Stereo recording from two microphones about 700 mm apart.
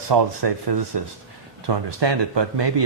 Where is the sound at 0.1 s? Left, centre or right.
Right.